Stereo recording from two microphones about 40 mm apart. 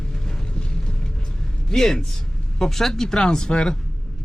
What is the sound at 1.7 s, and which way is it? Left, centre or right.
Speech, centre.